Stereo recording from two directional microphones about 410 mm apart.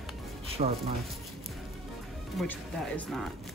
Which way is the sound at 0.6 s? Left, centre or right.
Centre.